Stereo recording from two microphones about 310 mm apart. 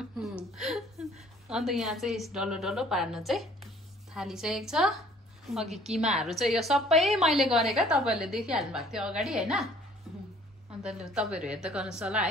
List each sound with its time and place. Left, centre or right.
0.2 s a sound: centre
1.5 s a woman's voice: centre
5.9 s a woman's voice: right
6.1 s a woman's voice: centre
10.1 s music: centre
10.8 s a woman's voice: centre